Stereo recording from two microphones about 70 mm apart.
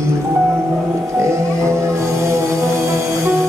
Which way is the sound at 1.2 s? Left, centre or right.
Right.